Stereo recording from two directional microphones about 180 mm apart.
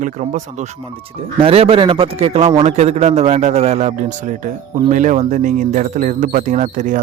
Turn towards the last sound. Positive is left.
turn(degrees=-45)  # may be behind; listen again after turning